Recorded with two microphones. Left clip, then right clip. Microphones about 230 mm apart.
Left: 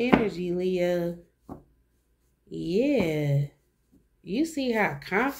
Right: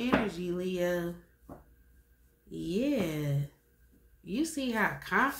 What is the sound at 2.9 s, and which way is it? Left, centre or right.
Speech, right.